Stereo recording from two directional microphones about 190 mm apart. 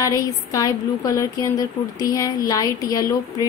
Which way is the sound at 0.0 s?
15° left (ahead or behind).